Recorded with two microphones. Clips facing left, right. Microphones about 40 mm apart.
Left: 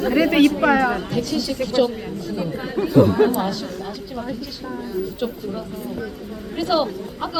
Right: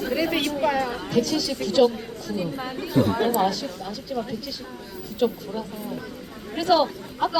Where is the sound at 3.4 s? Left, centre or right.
Centre.